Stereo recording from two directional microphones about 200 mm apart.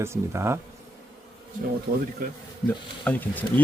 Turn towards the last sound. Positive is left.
turn(degrees=10)  # may be behind; listen again after turning